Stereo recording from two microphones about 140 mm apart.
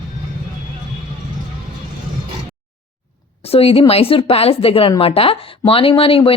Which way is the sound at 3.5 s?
45° left (ahead or behind).